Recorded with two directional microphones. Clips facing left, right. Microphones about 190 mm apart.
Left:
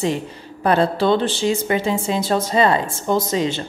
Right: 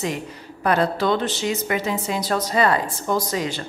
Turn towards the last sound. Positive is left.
turn(degrees=25)  # may be behind; listen again after turning